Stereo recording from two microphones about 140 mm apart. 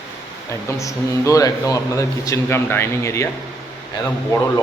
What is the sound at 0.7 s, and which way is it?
Speech, 20° left (ahead or behind).